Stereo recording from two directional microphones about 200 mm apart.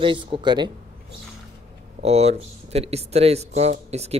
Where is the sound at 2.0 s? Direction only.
30° right (ahead or behind).